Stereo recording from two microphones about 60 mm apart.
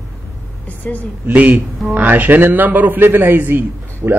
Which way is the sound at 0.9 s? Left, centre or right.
Left.